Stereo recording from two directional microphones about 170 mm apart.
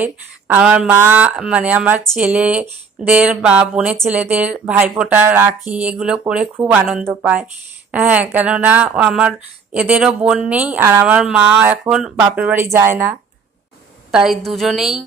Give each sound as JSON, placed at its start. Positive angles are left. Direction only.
{"t": 0.0, "sound": "a woman's voice", "side_deg": -10}
{"t": 14.1, "sound": "a woman's voice", "side_deg": 0}